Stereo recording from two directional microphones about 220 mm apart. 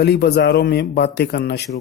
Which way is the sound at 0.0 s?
45° left (ahead or behind).